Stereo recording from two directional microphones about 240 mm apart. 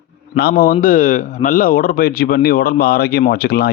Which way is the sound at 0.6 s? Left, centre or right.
Left.